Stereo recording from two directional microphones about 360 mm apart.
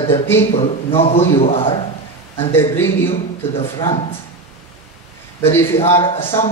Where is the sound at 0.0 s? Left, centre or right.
Centre.